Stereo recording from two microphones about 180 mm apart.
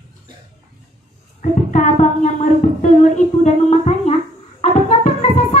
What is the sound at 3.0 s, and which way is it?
Speech, 40° left (ahead or behind).